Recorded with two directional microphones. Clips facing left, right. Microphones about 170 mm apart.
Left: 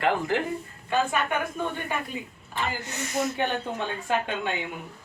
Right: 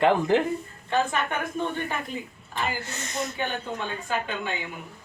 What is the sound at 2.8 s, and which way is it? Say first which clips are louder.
Speech: left 4 dB; 15° left (ahead or behind).